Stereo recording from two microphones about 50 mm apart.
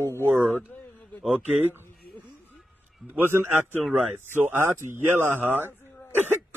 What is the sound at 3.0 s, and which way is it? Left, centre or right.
A man's voice, right.